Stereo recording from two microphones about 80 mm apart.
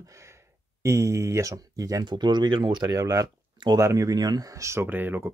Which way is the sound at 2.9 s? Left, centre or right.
Right.